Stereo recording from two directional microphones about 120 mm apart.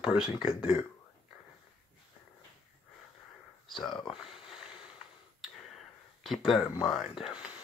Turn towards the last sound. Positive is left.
turn(degrees=-5)  # may be behind; listen again after turning